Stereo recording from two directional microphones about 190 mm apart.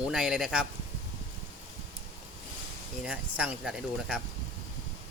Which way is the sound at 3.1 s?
5° right (ahead or behind).